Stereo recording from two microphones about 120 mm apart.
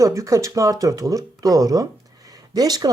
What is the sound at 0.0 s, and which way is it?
Speech, 25° right (ahead or behind).